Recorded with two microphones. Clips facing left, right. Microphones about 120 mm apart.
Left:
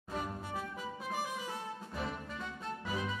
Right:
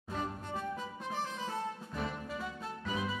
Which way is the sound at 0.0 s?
5° left (ahead or behind).